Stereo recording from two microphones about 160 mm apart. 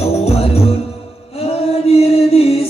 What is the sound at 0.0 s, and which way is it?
Music, 40° left (ahead or behind).